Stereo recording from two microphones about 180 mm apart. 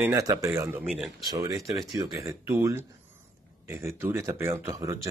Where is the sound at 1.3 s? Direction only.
20° right (ahead or behind).